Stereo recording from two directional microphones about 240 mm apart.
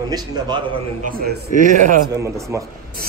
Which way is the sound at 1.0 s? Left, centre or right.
Right.